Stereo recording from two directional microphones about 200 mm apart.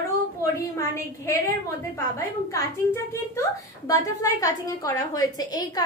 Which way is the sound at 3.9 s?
15° left (ahead or behind).